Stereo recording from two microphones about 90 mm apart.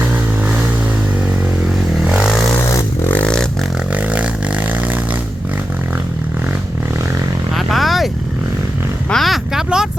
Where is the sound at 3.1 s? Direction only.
15° left (ahead or behind).